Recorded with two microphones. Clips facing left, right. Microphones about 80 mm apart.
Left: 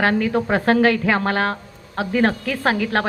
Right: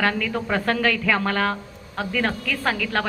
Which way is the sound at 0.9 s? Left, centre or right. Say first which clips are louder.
Left 3 dB; left.